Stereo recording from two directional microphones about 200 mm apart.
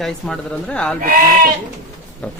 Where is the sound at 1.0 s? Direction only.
45° right (ahead or behind).